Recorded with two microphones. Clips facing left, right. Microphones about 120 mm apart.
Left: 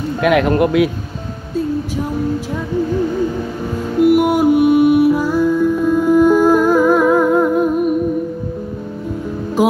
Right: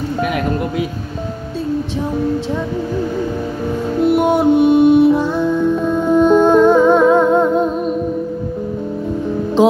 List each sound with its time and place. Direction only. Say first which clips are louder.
0.2 s speech: left 7 dB; 90° left
4.0 s music: left 2 dB; 25° right (ahead or behind)
9.6 s music: right 3 dB; 25° right (ahead or behind)